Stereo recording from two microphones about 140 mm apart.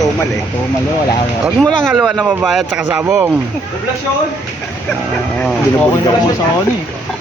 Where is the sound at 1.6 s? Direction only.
Centre (ahead or behind).